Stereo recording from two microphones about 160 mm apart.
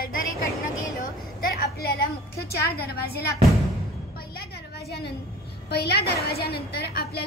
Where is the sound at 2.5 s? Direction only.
75° left (ahead or behind).